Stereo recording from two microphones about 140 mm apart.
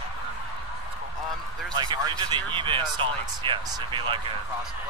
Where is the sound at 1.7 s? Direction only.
30° right (ahead or behind).